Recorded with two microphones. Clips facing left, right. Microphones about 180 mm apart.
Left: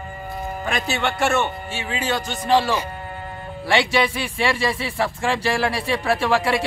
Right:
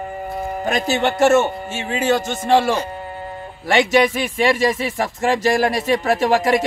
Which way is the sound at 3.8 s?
45° right (ahead or behind).